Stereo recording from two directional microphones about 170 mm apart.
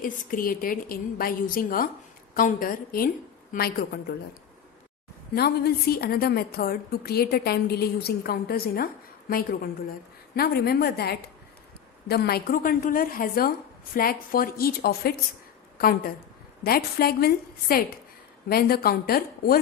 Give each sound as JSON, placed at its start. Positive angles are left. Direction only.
{"t": 0.0, "sound": "a woman's voice", "side_deg": 55}
{"t": 5.3, "sound": "a woman's voice", "side_deg": 70}
{"t": 10.3, "sound": "a woman's voice", "side_deg": 65}